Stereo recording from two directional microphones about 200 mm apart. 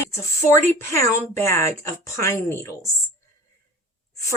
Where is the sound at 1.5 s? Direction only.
15° left (ahead or behind).